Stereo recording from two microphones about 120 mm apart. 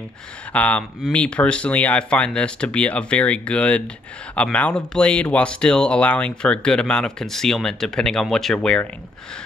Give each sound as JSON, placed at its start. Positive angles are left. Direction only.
{"t": 0.5, "sound": "speech", "side_deg": 10}